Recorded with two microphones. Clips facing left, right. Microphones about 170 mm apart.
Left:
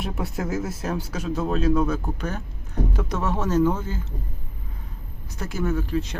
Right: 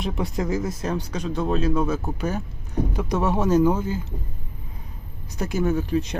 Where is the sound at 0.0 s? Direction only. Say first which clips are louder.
Right 3 dB; 5° left (ahead or behind); by 4.0 s 15° right (ahead or behind).